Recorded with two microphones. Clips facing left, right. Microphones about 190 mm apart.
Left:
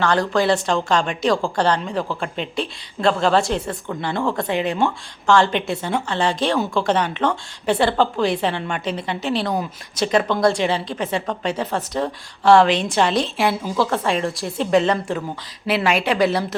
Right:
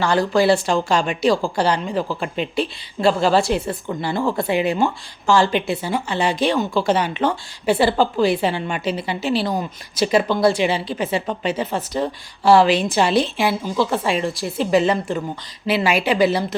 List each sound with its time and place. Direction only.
0.0 s a woman's voice: 5° right (ahead or behind)